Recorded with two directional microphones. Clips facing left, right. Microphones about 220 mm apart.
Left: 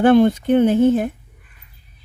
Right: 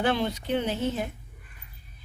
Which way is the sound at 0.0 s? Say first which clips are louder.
Left 14 dB; 50° left (ahead or behind).